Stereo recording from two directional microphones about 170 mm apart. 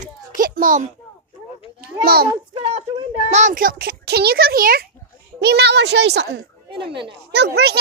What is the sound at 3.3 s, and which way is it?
A child's voice, 50° right (ahead or behind).